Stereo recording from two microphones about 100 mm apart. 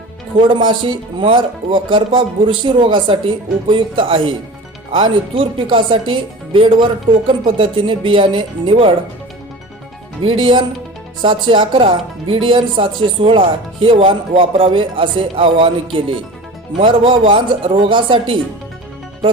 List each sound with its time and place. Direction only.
0.3 s speech: 55° right (ahead or behind)
10.2 s speech: 65° right (ahead or behind)
11.2 s speech: 55° right (ahead or behind)